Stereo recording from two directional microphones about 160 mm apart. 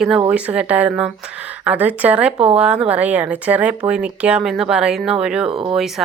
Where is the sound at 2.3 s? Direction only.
35° right (ahead or behind).